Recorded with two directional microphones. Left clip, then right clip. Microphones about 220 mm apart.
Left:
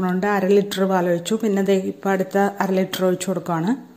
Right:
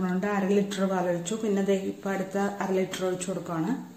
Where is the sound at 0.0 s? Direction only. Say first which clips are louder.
Left 8 dB; 40° left (ahead or behind).